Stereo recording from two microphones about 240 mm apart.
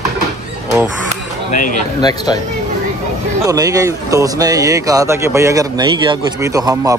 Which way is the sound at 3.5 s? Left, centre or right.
Centre.